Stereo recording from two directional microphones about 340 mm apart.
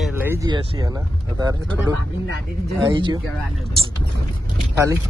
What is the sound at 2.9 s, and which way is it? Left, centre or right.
Speech, centre.